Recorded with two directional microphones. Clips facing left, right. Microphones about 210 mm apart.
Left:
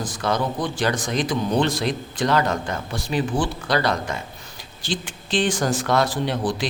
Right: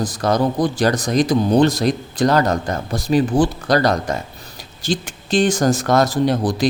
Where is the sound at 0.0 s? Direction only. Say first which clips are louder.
Right 6 dB; 40° right (ahead or behind).